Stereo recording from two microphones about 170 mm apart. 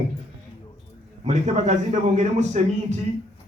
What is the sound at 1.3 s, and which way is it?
A man's voice, 40° right (ahead or behind).